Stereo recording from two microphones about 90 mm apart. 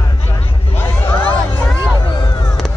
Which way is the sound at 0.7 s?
25° left (ahead or behind).